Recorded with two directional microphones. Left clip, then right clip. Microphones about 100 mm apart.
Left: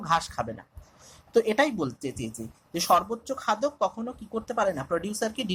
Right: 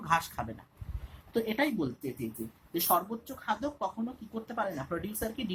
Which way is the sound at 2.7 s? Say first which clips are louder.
Left 7 dB; 90° left.